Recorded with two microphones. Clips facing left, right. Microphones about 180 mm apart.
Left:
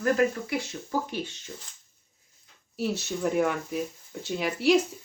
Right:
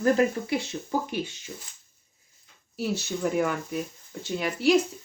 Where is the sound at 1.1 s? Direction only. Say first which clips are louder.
Right 2 dB; 10° right (ahead or behind).